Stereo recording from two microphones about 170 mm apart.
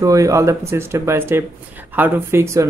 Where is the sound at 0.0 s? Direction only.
20° right (ahead or behind).